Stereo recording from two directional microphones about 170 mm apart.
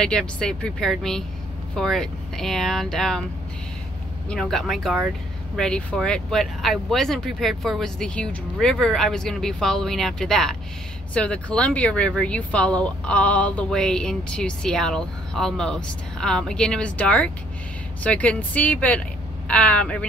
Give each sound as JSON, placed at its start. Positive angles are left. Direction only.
{"t": 0.0, "sound": "speech", "side_deg": 5}
{"t": 4.3, "sound": "speech", "side_deg": 0}